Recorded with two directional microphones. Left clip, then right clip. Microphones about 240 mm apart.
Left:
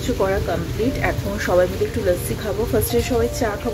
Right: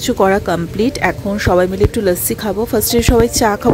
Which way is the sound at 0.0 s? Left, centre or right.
Right.